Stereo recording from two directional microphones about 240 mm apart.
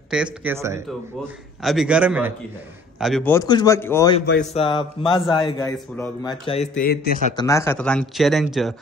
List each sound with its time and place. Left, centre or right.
0.1 s speech: centre
0.8 s a man's voice: centre; by 6.7 s left
6.8 s a man's voice: left
7.3 s a man's voice: centre